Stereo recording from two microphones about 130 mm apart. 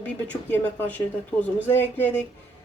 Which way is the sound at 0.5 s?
15° left (ahead or behind).